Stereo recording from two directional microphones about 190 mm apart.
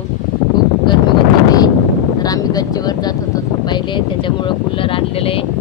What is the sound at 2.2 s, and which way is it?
Speech, 20° left (ahead or behind).